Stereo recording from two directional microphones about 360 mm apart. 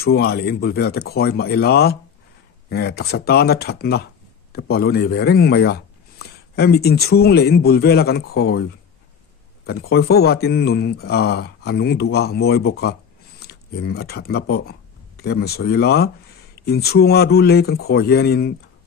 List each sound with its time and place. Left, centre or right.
0.0 s speech: left
9.7 s speech: left